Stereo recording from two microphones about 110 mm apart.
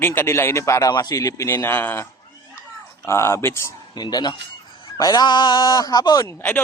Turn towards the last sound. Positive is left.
turn(degrees=35)  # may be behind; listen again after turning